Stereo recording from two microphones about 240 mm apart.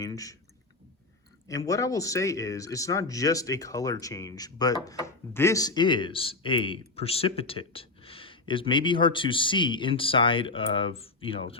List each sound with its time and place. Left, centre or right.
0.0 s speech: centre
1.5 s speech: centre